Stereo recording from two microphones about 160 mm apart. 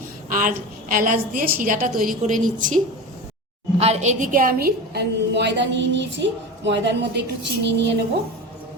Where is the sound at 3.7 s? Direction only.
40° right (ahead or behind); by 8.0 s 90° right.